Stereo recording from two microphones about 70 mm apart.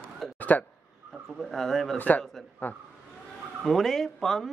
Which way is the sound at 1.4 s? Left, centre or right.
Centre.